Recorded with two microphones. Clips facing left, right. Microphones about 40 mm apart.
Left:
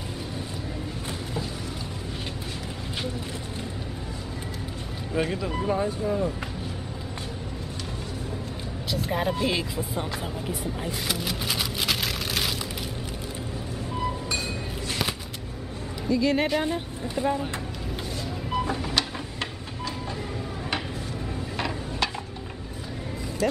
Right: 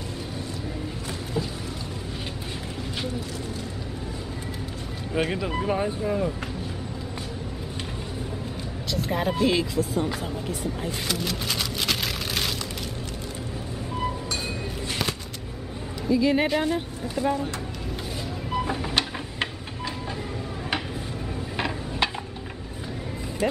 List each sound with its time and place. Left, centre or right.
5.1 s speech: centre
8.9 s vehicle: centre
9.4 s speech: centre
16.1 s speech: centre
17.0 s speech: centre
18.5 s music: centre
21.5 s a sound: centre
23.4 s speech: right